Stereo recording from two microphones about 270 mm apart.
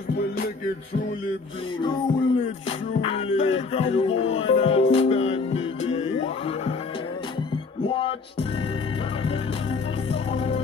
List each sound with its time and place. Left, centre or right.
1.8 s music: centre
7.8 s music: centre
10.3 s music: left